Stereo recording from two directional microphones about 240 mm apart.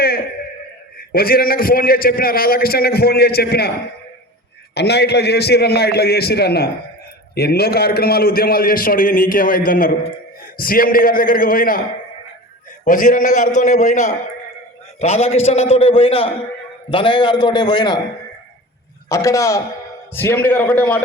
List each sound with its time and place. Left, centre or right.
0.9 s a man's voice: left
4.7 s a man's voice: left; by 18.0 s centre
19.0 s a man's voice: centre